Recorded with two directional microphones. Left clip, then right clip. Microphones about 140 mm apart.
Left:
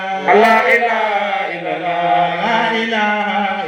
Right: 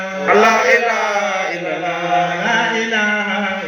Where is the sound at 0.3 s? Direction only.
30° left (ahead or behind).